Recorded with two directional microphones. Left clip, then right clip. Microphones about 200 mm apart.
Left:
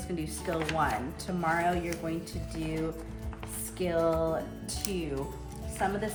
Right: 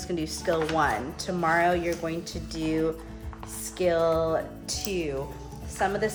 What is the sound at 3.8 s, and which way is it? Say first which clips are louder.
Speech: right 5 dB; 40° right (ahead or behind).